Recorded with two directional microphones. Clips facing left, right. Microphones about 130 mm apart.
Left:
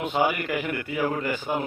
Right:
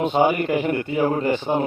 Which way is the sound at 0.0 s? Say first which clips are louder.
Right 6 dB; 25° right (ahead or behind).